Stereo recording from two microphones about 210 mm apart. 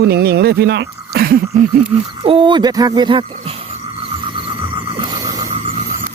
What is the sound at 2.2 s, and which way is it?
Speech, 25° right (ahead or behind).